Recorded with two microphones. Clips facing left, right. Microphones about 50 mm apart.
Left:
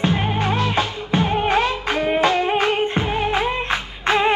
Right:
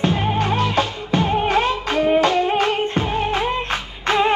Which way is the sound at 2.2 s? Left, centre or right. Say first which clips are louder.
Even; left.